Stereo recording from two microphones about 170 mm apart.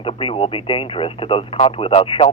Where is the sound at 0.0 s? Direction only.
30° left (ahead or behind).